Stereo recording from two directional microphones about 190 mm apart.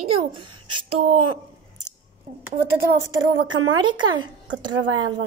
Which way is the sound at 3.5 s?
90° right.